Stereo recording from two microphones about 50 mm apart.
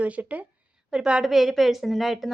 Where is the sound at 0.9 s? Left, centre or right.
Centre.